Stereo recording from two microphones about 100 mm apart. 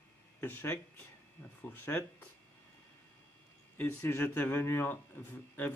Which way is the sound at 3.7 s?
20° left (ahead or behind).